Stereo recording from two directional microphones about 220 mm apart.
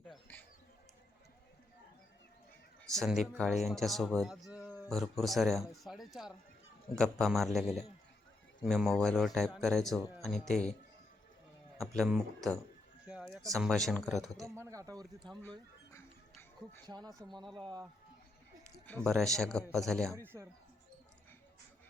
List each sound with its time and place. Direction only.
0.1 s a sound: 10° left (ahead or behind)
2.8 s a man's voice: centre (ahead or behind)
11.9 s a man's voice: centre (ahead or behind)
14.6 s speech: 15° right (ahead or behind)
15.4 s a sound: 10° left (ahead or behind)
16.8 s speech: 20° right (ahead or behind)
19.0 s a man's voice: centre (ahead or behind)
20.1 s speech: 10° right (ahead or behind)